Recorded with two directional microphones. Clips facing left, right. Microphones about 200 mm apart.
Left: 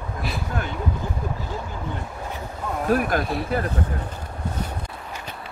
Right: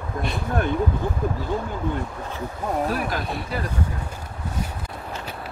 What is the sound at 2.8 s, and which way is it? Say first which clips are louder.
Speech: left 4 dB; 50° left (ahead or behind).